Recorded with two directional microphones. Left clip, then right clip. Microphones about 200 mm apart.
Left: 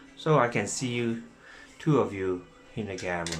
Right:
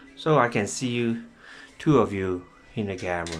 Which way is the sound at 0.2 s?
25° right (ahead or behind).